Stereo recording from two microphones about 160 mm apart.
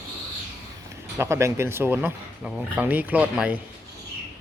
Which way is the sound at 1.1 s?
15° right (ahead or behind).